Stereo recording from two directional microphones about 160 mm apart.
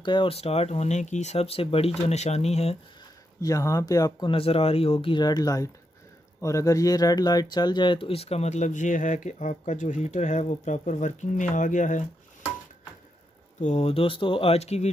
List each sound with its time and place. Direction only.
0.0 s speech: 30° left (ahead or behind)
3.4 s speech: 20° left (ahead or behind); by 12.1 s 50° left (ahead or behind)
13.6 s speech: 45° left (ahead or behind)